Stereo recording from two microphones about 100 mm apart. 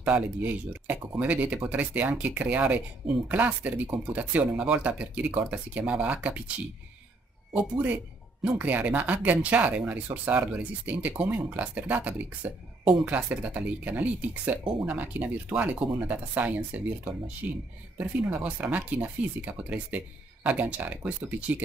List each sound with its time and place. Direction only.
0.0 s speech: 10° right (ahead or behind)
7.5 s speech: 15° right (ahead or behind)